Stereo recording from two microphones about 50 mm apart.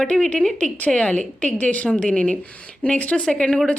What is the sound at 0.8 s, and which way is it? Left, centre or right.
Speech, left.